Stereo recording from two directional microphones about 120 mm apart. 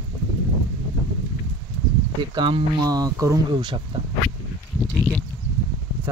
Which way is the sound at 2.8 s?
30° right (ahead or behind).